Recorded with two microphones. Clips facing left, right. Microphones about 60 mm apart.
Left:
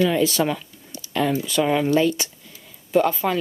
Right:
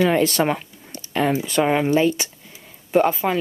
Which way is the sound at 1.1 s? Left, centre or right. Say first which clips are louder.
Right 1 dB; right.